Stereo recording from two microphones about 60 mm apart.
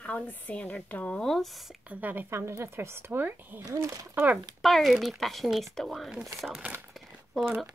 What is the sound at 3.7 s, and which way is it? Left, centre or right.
Speech, right.